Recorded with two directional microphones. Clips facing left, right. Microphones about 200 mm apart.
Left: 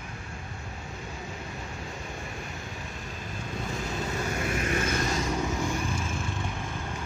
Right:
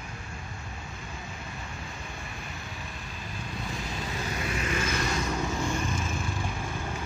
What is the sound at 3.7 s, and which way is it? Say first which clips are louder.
Vehicle: left 4 dB; 45° left (ahead or behind).